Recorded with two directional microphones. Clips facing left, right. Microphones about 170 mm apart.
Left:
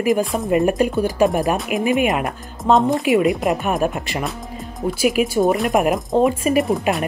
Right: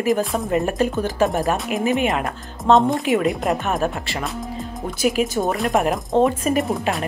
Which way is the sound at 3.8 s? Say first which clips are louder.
Left 2 dB; 15° left (ahead or behind).